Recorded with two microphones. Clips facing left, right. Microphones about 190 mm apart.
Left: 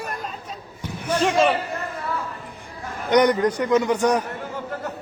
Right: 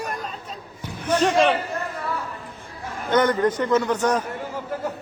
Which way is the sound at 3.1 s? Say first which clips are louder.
Left 2 dB; 15° left (ahead or behind).